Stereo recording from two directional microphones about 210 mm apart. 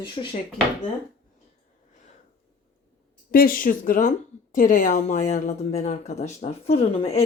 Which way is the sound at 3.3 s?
45° left (ahead or behind).